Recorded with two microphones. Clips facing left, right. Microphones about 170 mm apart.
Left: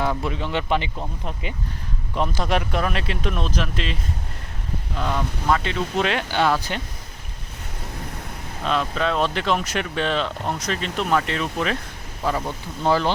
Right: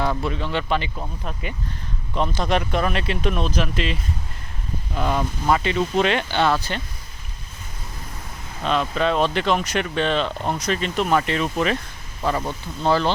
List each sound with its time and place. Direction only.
0.0 s speech: 10° left (ahead or behind)
2.1 s speech: 5° left (ahead or behind)
4.9 s speech: 10° right (ahead or behind); by 6.8 s 15° left (ahead or behind)
8.6 s speech: centre (ahead or behind)